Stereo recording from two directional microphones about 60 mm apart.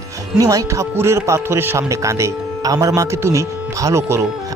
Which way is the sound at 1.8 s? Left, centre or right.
Right.